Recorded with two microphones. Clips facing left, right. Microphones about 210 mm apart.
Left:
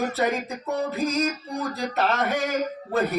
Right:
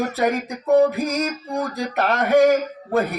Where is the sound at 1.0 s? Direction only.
15° right (ahead or behind).